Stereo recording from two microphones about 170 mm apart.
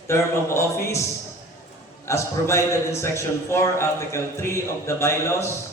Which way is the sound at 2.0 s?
15° left (ahead or behind).